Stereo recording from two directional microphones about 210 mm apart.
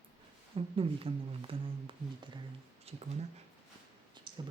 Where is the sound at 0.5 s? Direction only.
25° right (ahead or behind).